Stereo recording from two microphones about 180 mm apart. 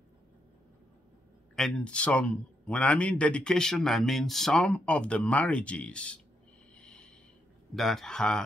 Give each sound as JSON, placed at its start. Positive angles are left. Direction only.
{"t": 1.5, "sound": "a man's voice", "side_deg": 5}
{"t": 6.7, "sound": "a sound", "side_deg": 5}
{"t": 7.7, "sound": "a man's voice", "side_deg": 0}